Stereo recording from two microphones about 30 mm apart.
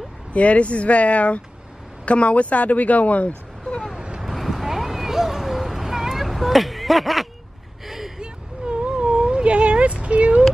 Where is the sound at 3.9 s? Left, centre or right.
Right.